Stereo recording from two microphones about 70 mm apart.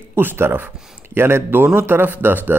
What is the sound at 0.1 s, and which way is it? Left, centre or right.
Speech, right.